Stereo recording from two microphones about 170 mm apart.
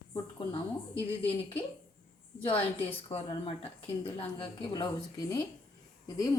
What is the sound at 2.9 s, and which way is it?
A woman's voice, 30° left (ahead or behind).